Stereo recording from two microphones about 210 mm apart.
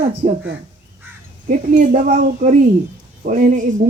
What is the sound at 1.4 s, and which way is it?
A woman's voice, 40° right (ahead or behind).